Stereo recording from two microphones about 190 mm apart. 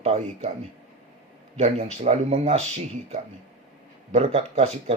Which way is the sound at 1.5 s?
35° right (ahead or behind).